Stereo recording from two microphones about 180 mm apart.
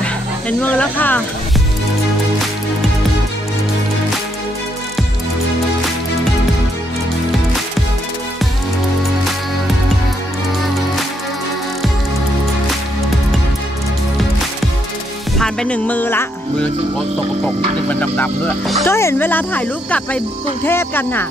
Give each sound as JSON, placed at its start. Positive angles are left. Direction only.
{"t": 0.0, "sound": "music", "side_deg": 10}
{"t": 15.3, "sound": "speech", "side_deg": 5}
{"t": 17.8, "sound": "speech", "side_deg": 10}